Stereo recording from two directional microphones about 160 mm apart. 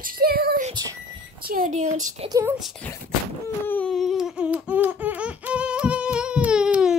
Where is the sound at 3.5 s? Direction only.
10° left (ahead or behind).